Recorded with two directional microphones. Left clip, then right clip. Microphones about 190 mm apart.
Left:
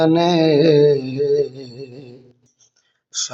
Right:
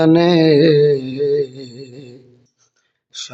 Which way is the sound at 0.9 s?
25° right (ahead or behind).